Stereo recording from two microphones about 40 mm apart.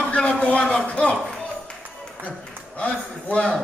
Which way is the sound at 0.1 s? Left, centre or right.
Left.